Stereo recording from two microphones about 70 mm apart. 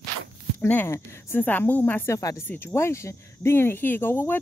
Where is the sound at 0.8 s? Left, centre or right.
Left.